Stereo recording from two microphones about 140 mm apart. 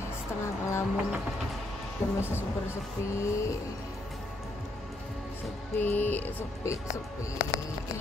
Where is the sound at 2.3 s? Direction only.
20° left (ahead or behind).